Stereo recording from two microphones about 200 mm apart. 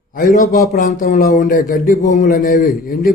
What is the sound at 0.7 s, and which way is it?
Speech, 40° left (ahead or behind).